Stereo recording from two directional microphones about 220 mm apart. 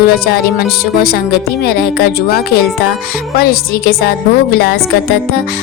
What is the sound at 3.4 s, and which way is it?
Speech, 45° left (ahead or behind).